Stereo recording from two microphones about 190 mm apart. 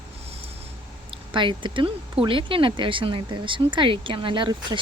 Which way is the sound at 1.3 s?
25° right (ahead or behind).